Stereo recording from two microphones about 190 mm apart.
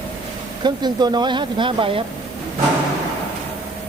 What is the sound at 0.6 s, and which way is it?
Speech, 20° right (ahead or behind).